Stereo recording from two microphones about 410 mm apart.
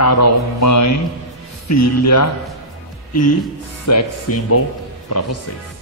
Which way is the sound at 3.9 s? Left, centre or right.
Left.